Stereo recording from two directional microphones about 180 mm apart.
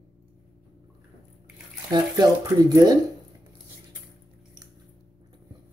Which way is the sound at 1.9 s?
20° right (ahead or behind).